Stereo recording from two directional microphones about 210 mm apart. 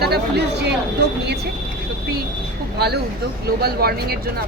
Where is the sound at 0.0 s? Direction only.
50° right (ahead or behind).